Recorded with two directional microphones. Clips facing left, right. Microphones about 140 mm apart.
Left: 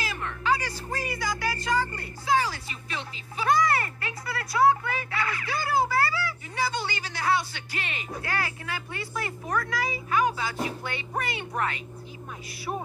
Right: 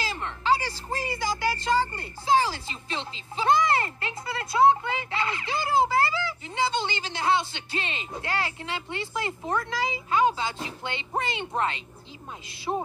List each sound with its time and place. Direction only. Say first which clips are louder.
0.0 s speech: right 1 dB; 30° right (ahead or behind)